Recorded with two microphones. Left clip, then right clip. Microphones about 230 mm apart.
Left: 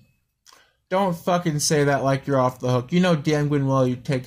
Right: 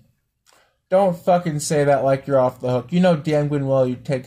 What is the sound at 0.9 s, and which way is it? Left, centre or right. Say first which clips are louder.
Speech: right 5 dB; left.